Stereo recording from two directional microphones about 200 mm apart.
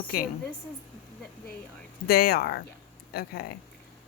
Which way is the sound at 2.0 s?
50° left (ahead or behind).